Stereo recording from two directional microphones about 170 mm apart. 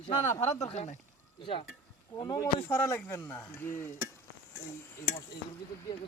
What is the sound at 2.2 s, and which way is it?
Speech, 20° left (ahead or behind).